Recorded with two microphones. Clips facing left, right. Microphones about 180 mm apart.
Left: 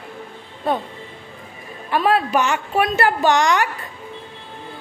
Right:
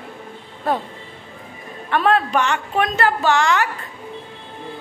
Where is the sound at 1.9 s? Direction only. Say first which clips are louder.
Even; 5° left (ahead or behind).